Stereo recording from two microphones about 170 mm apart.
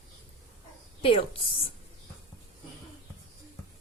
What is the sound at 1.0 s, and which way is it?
Speech, 30° left (ahead or behind).